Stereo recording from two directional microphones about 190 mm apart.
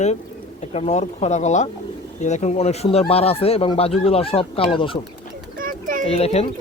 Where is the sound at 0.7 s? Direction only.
35° left (ahead or behind).